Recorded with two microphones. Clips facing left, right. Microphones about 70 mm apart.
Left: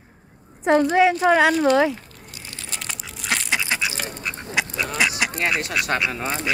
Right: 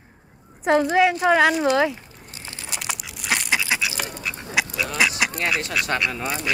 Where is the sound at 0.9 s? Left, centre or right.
Centre.